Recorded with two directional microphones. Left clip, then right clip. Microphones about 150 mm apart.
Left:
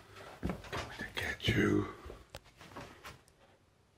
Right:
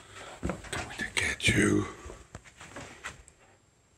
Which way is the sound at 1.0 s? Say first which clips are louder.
Right 10 dB; 20° right (ahead or behind).